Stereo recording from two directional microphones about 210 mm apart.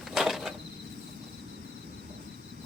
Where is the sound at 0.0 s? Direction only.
Centre (ahead or behind).